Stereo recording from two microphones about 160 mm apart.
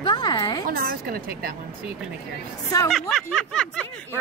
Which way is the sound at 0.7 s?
65° right (ahead or behind).